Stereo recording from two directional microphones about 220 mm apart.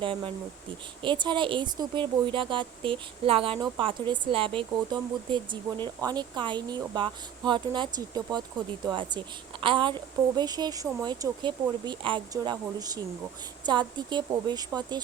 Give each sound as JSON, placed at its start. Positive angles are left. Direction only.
{"t": 0.0, "sound": "speech", "side_deg": -25}